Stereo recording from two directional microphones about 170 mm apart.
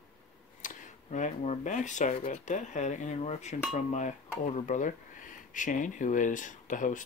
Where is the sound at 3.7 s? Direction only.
45° left (ahead or behind).